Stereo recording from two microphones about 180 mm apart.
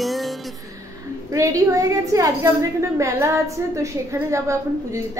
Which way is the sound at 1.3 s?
20° right (ahead or behind).